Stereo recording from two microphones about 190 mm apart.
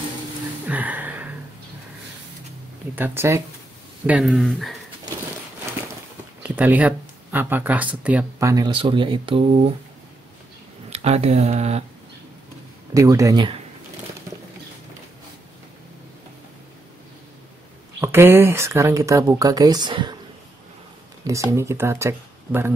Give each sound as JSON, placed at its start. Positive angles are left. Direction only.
{"t": 0.7, "sound": "a sound", "side_deg": -10}
{"t": 3.0, "sound": "speech", "side_deg": -15}
{"t": 6.4, "sound": "speech", "side_deg": -10}
{"t": 10.9, "sound": "speech", "side_deg": -35}
{"t": 12.9, "sound": "speech", "side_deg": -15}
{"t": 18.0, "sound": "speech", "side_deg": -10}
{"t": 21.2, "sound": "speech", "side_deg": -15}